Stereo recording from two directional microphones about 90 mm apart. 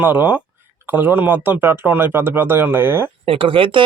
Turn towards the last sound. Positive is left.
turn(degrees=-70)  # may be behind; listen again after turning